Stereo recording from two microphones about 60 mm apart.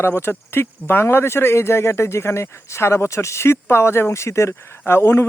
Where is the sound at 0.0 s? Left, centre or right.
Left.